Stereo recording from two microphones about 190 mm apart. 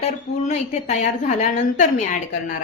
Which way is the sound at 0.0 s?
35° left (ahead or behind).